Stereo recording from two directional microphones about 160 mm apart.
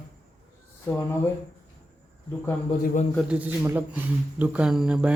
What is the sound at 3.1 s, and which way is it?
Speech, 5° right (ahead or behind).